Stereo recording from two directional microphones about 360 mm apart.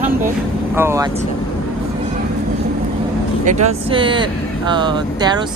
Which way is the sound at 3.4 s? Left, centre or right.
Centre.